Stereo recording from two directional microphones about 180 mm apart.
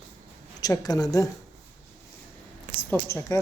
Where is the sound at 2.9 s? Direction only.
15° left (ahead or behind).